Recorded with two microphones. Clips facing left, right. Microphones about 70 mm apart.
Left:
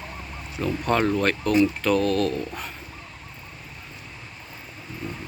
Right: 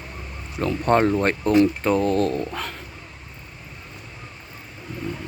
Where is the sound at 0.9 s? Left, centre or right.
Right.